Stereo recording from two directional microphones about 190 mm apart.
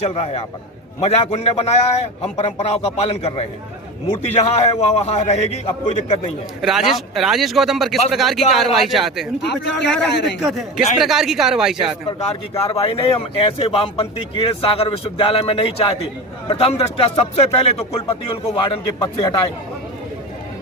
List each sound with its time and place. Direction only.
0.1 s speech: 35° left (ahead or behind)
6.6 s speech: centre (ahead or behind)
9.4 s speech: 65° left (ahead or behind)
10.4 s speech: centre (ahead or behind)
12.2 s speech: 30° left (ahead or behind)